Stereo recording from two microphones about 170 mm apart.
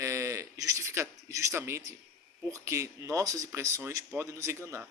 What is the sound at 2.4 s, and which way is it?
A man's voice, 15° right (ahead or behind).